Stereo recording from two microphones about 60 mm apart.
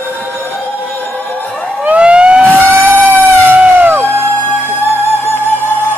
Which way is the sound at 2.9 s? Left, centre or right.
Right.